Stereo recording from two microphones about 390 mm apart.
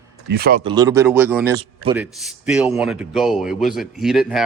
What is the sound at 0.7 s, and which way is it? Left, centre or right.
A man's voice, centre.